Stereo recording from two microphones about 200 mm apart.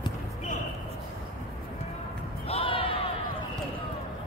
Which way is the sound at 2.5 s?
25° left (ahead or behind).